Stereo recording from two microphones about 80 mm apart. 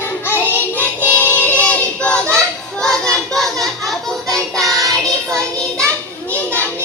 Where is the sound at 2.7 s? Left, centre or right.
Centre.